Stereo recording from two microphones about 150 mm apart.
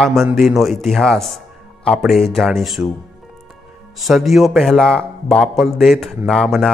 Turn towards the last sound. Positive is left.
turn(degrees=0)  # may be behind; listen again after turning